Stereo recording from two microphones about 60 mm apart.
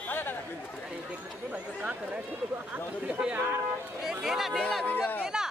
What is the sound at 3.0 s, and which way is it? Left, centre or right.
Speech, centre.